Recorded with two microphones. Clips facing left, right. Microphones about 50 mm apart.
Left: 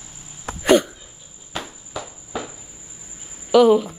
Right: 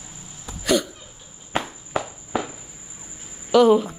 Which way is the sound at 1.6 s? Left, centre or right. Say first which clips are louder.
Right 5 dB; right.